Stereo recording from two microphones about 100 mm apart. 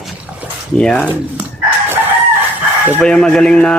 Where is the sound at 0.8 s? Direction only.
10° left (ahead or behind).